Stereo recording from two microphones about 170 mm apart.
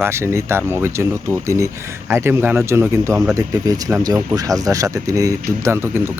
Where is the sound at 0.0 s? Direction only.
15° right (ahead or behind).